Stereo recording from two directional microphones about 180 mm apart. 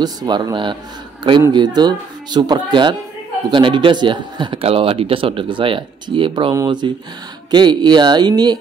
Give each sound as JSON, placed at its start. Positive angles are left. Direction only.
{"t": 0.0, "sound": "speech", "side_deg": -25}